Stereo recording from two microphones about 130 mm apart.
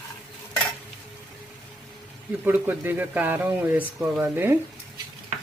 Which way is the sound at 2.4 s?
15° right (ahead or behind).